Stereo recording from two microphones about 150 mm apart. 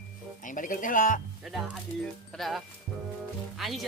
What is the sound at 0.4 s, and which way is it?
Speech, 60° left (ahead or behind).